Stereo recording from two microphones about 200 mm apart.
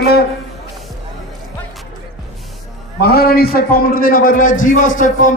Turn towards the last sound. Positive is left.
turn(degrees=40)  # may be behind; listen again after turning